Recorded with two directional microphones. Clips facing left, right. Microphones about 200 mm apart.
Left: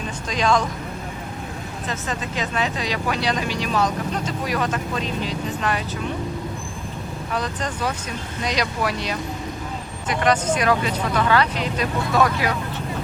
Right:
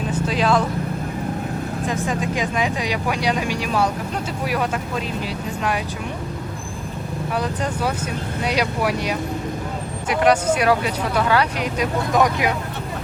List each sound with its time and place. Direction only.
0.3 s speech: 5° right (ahead or behind)
1.9 s speech: 10° right (ahead or behind)
7.3 s speech: 10° right (ahead or behind)